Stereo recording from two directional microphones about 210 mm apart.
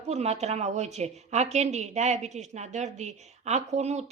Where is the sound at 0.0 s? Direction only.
30° right (ahead or behind).